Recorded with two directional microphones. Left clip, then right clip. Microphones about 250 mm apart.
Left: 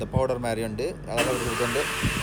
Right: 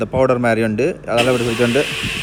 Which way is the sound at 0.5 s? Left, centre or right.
Right.